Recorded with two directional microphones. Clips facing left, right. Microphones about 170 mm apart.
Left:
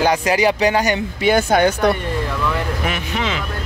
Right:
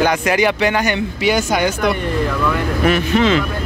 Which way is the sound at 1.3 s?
55° left (ahead or behind).